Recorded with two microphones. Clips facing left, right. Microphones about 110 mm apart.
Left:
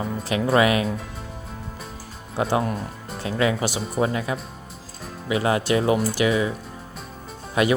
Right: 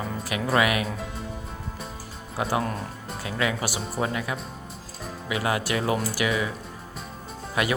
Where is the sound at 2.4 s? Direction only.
25° left (ahead or behind).